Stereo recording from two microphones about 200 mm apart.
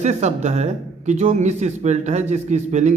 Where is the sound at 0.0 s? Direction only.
35° right (ahead or behind).